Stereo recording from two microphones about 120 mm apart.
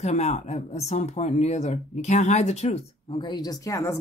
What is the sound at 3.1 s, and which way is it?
Speech, 40° left (ahead or behind).